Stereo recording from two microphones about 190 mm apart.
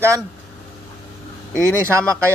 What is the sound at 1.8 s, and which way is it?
Speech, 15° right (ahead or behind).